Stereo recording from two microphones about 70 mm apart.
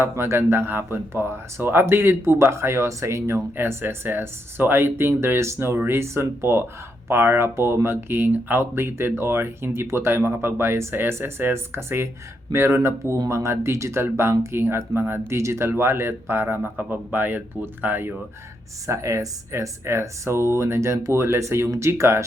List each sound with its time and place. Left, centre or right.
0.0 s speech: right
18.9 s speech: right